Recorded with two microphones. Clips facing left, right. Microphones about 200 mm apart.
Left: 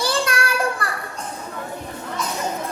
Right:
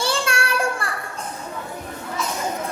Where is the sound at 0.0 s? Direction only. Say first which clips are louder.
Left 1 dB; 30° right (ahead or behind).